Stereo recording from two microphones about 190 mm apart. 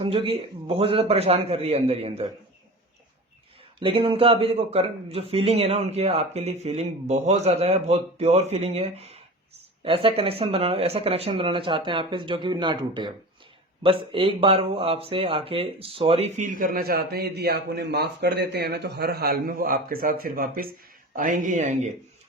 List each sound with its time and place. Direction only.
0.0 s a man's voice: 30° right (ahead or behind)
3.8 s a man's voice: 25° right (ahead or behind)